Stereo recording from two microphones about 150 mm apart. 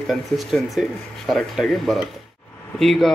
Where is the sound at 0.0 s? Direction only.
Centre (ahead or behind).